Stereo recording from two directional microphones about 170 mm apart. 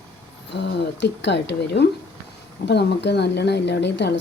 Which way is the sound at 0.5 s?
90° left.